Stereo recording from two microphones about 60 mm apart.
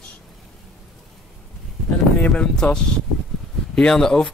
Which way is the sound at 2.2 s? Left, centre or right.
Centre.